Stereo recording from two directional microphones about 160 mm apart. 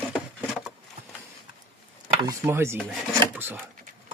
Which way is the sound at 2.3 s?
15° right (ahead or behind).